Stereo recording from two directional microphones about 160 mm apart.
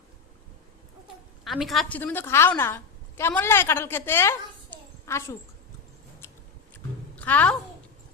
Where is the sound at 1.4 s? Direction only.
Centre (ahead or behind).